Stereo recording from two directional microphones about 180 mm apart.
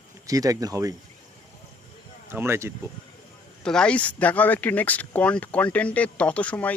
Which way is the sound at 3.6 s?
5° left (ahead or behind).